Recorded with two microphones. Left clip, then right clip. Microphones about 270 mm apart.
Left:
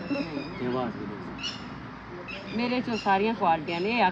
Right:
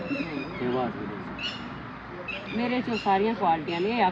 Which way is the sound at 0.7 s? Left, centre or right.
Centre.